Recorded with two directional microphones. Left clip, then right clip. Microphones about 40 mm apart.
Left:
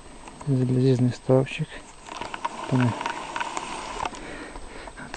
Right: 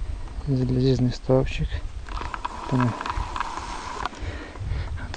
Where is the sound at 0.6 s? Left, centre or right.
Centre.